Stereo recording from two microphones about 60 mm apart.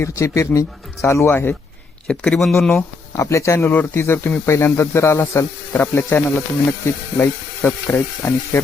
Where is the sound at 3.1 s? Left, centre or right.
Left.